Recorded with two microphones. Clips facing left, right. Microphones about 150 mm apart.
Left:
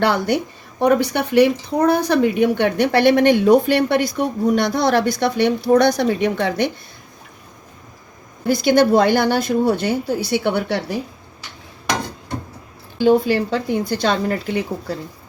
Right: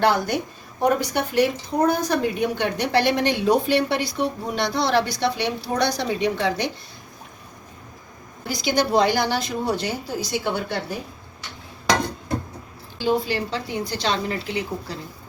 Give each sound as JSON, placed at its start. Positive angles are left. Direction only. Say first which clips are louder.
{"t": 0.0, "sound": "a woman's voice", "louder": "left 2 dB", "side_deg": 60}
{"t": 8.4, "sound": "speech", "louder": "left 8 dB", "side_deg": 55}
{"t": 13.0, "sound": "a woman's voice", "louder": "left 8 dB", "side_deg": 55}